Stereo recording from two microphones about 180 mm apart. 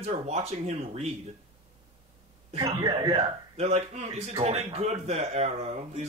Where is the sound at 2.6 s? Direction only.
20° right (ahead or behind).